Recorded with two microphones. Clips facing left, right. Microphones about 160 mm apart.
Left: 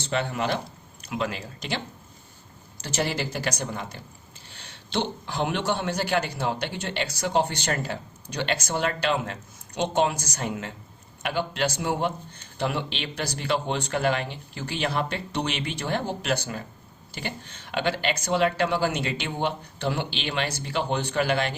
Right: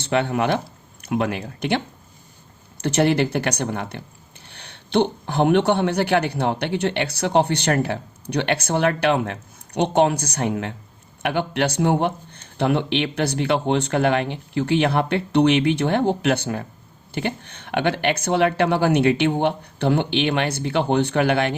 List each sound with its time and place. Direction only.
0.0 s a man's voice: 60° right (ahead or behind)
2.8 s a man's voice: 60° right (ahead or behind)